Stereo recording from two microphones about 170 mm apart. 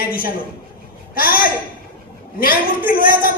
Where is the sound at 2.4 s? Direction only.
60° left (ahead or behind).